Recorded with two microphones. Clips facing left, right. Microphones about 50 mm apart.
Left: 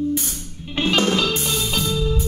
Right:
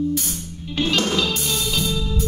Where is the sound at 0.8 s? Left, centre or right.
Left.